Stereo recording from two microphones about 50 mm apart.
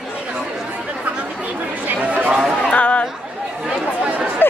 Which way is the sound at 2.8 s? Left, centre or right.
Left.